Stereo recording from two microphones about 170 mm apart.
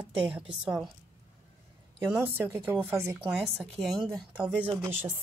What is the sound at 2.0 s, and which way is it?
A woman's voice, 15° right (ahead or behind).